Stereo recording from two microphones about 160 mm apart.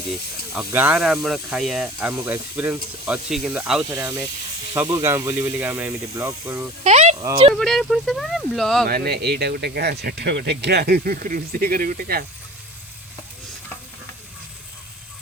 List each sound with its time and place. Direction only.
0.5 s speech: 10° right (ahead or behind)
6.8 s a sound: 45° right (ahead or behind)
7.6 s speech: centre (ahead or behind)
8.9 s speech: 80° right; by 12.2 s 65° right (ahead or behind)